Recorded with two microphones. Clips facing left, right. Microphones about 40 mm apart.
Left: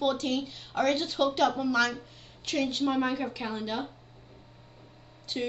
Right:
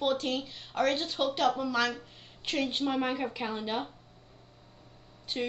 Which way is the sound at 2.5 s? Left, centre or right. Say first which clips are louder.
Left 2 dB; centre.